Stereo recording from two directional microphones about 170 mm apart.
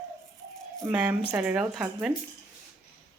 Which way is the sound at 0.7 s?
5° right (ahead or behind).